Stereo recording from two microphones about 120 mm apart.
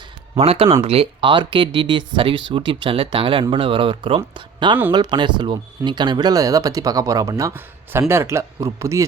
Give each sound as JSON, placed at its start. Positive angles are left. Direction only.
{"t": 0.3, "sound": "speech", "side_deg": -55}